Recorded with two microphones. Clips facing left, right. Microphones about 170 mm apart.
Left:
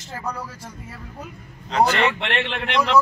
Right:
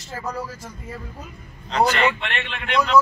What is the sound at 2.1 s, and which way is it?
Speech, 75° left (ahead or behind).